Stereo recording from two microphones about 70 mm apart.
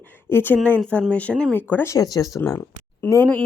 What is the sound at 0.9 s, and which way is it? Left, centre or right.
Speech, centre.